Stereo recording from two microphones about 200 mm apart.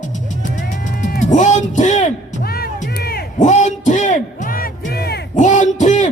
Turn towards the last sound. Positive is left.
turn(degrees=35)  # may be behind; listen again after turning